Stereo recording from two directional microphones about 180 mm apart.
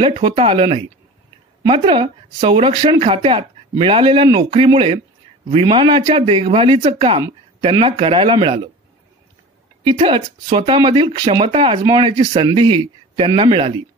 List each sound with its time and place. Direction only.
0.1 s speech: 30° right (ahead or behind)
9.8 s speech: 30° right (ahead or behind)